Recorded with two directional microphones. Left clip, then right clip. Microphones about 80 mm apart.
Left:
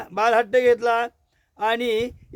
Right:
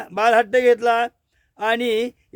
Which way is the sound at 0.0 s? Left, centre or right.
Right.